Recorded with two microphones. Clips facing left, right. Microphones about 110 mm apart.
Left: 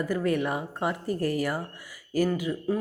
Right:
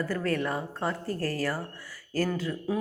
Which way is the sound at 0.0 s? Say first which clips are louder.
Left 3 dB; 15° left (ahead or behind).